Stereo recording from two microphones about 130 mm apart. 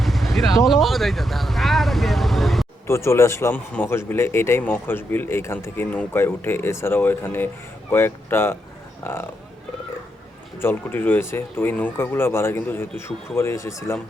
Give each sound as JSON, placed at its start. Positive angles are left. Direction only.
{"t": 0.0, "sound": "vehicle", "side_deg": 0}
{"t": 0.6, "sound": "speech", "side_deg": 0}
{"t": 2.8, "sound": "speech", "side_deg": 20}
{"t": 10.6, "sound": "speech", "side_deg": 15}